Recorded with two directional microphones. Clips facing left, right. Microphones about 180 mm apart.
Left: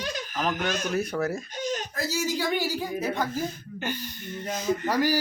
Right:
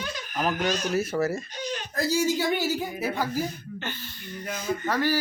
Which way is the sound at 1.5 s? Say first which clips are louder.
Left 3 dB; 45° left (ahead or behind).